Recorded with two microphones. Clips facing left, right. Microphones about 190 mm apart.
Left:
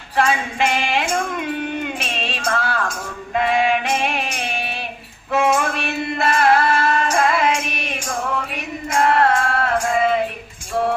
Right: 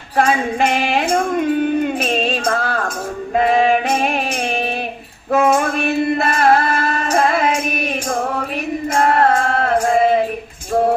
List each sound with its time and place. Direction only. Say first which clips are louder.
0.3 s music: right 4 dB; 45° right (ahead or behind)
5.3 s music: right 4 dB; 50° right (ahead or behind)